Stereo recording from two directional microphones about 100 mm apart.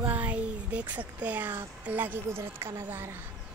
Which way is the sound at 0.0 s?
15° right (ahead or behind).